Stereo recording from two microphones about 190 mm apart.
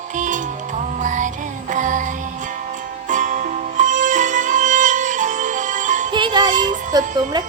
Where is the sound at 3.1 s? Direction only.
40° right (ahead or behind).